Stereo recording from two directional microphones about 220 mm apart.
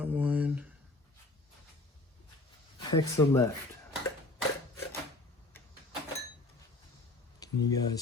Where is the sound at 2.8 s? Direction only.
20° left (ahead or behind).